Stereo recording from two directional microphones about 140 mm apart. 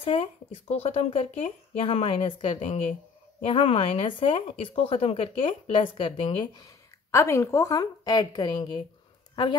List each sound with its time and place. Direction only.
0.0 s speech: 40° left (ahead or behind)